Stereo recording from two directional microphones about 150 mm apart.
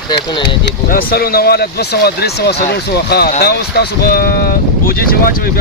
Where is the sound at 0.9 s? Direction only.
75° left (ahead or behind).